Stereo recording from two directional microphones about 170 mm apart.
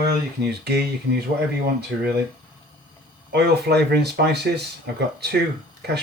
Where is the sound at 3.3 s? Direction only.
80° right.